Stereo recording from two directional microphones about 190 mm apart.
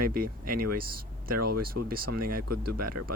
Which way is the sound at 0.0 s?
50° right (ahead or behind).